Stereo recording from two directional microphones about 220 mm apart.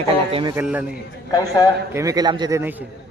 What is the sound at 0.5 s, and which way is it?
Speech, 5° right (ahead or behind).